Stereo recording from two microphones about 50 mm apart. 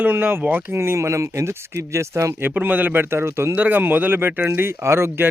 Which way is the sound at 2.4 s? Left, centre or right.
Right.